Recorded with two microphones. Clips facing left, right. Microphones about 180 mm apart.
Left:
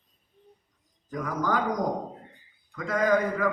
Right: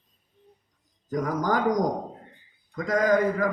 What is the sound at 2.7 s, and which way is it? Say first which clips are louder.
Speech: right 2 dB; 40° right (ahead or behind).